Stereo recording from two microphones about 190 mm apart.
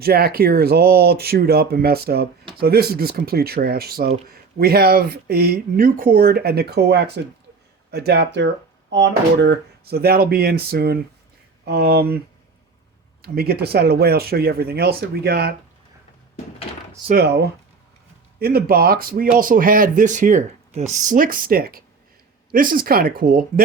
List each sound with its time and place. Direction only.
0.0 s speech: 55° right (ahead or behind)
13.2 s speech: 55° right (ahead or behind)
17.2 s speech: 60° right (ahead or behind)